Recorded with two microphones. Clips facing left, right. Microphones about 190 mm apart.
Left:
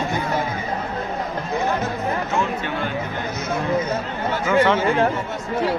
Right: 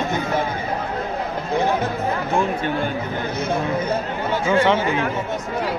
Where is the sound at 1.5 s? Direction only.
30° right (ahead or behind).